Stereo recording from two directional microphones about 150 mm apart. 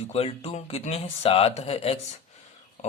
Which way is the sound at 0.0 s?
40° left (ahead or behind).